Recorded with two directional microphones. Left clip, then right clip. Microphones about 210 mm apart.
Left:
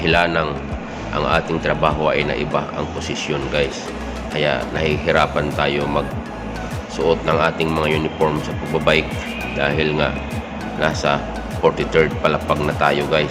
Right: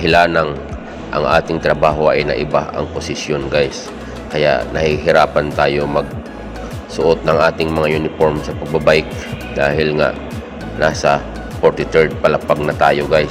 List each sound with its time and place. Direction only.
0.0 s speech: 20° right (ahead or behind)